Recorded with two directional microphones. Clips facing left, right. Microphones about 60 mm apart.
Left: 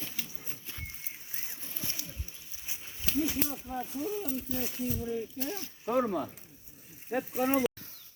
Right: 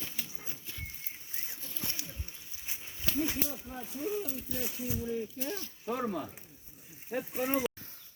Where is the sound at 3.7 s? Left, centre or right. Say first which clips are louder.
Left 7 dB; centre.